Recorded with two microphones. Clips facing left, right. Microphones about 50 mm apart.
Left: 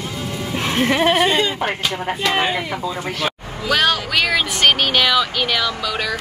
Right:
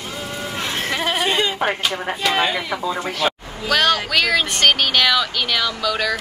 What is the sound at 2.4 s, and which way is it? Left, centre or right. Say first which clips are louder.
Speech: even; centre.